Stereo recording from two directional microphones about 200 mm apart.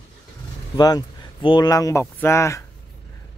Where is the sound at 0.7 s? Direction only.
20° left (ahead or behind).